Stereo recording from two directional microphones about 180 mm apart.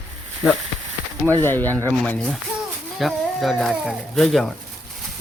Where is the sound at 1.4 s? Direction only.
10° left (ahead or behind).